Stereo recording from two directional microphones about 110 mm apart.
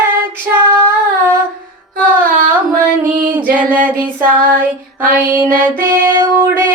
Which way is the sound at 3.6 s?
15° right (ahead or behind).